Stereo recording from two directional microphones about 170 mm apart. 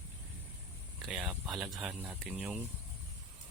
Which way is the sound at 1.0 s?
Centre (ahead or behind).